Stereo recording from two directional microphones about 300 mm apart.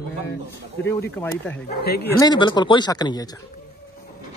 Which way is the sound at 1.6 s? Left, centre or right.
Left.